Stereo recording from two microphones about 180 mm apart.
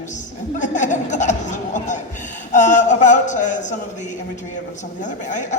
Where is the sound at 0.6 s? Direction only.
45° left (ahead or behind).